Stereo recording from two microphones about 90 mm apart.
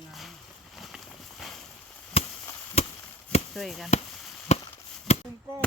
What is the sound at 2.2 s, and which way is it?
Chop, 90° left.